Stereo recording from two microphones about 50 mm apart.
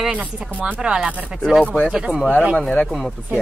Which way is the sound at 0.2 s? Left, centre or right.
Right.